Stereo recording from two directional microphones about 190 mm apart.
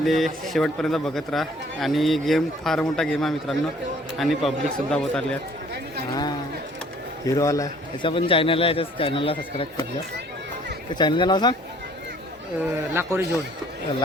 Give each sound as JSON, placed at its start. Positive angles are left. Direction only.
{"t": 0.0, "sound": "speech", "side_deg": 0}
{"t": 7.3, "sound": "a man's voice", "side_deg": 15}
{"t": 8.1, "sound": "speech", "side_deg": 30}
{"t": 10.9, "sound": "speech", "side_deg": 25}
{"t": 12.7, "sound": "speech", "side_deg": -15}